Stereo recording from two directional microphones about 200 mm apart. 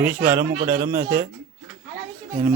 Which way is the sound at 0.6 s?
45° right (ahead or behind).